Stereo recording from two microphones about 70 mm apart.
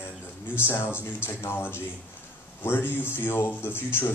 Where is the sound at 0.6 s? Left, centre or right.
Left.